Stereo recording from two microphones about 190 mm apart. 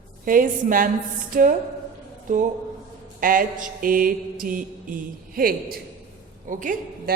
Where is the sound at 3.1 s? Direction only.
45° right (ahead or behind).